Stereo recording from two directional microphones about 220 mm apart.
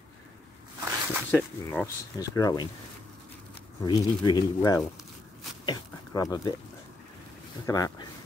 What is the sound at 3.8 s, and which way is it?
Speech, 20° left (ahead or behind).